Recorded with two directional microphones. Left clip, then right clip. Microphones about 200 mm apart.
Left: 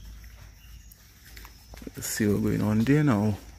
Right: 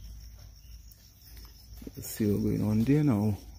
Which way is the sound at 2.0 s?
5° right (ahead or behind).